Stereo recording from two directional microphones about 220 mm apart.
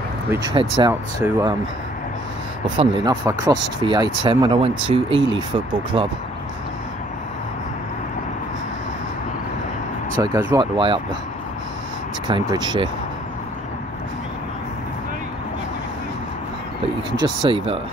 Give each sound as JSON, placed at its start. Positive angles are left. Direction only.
{"t": 0.3, "sound": "speech", "side_deg": -15}
{"t": 2.8, "sound": "speech", "side_deg": -25}
{"t": 10.1, "sound": "speech", "side_deg": -15}
{"t": 12.3, "sound": "speech", "side_deg": -20}
{"t": 17.2, "sound": "speech", "side_deg": -20}